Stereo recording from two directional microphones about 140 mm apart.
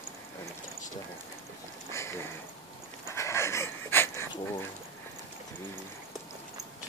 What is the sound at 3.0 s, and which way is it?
Dog, 20° left (ahead or behind).